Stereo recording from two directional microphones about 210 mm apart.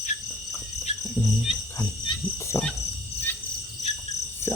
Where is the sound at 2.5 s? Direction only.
10° left (ahead or behind).